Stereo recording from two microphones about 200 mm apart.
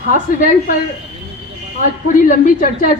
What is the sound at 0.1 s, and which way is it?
Speech, 45° left (ahead or behind).